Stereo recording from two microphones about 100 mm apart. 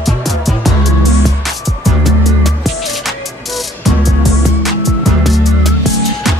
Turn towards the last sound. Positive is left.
turn(degrees=0)  # may be behind; listen again after turning